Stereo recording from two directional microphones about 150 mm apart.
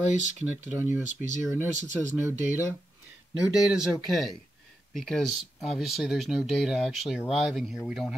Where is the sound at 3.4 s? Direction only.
5° right (ahead or behind).